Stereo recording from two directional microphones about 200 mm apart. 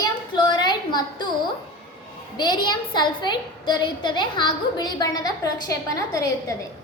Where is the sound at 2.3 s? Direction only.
20° left (ahead or behind).